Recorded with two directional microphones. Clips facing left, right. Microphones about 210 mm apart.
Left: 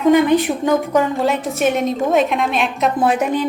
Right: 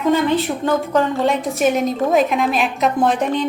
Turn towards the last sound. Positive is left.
turn(degrees=10)  # may be behind; listen again after turning